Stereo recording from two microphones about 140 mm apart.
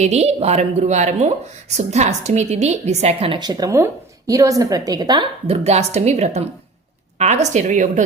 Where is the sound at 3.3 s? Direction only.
30° right (ahead or behind).